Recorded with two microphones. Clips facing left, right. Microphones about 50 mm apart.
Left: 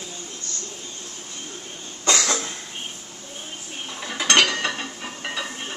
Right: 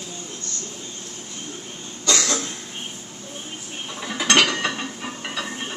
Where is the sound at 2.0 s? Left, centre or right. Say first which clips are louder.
Left 1 dB; left.